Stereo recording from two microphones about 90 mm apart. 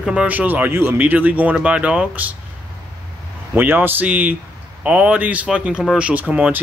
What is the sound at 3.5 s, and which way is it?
Speech, 20° right (ahead or behind).